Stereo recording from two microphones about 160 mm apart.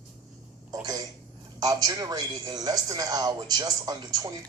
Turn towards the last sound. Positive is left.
turn(degrees=-25)  # may be behind; listen again after turning